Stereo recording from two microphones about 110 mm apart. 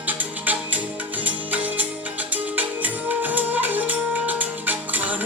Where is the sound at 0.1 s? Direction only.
15° right (ahead or behind).